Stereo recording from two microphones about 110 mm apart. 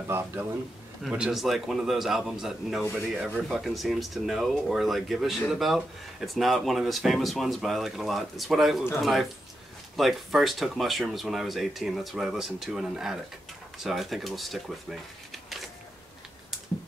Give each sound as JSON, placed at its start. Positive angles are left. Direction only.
{"t": 0.1, "sound": "speech", "side_deg": -20}
{"t": 1.1, "sound": "speech", "side_deg": -5}